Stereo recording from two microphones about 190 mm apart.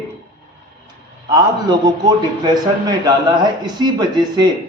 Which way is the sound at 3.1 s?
25° right (ahead or behind).